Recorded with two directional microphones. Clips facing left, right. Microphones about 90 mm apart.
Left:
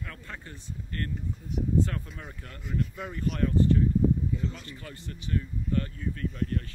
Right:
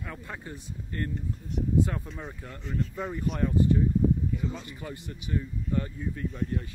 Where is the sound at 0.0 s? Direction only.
15° right (ahead or behind).